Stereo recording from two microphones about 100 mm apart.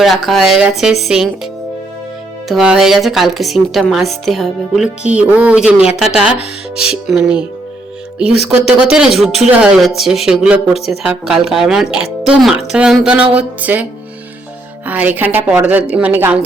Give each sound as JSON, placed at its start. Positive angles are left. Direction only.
{"t": 0.3, "sound": "a woman's voice", "side_deg": -5}
{"t": 2.5, "sound": "a woman's voice", "side_deg": -5}
{"t": 14.8, "sound": "speech", "side_deg": -15}